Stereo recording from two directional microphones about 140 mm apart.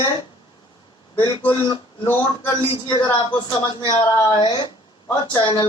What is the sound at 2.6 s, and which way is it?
A man's voice, 40° left (ahead or behind).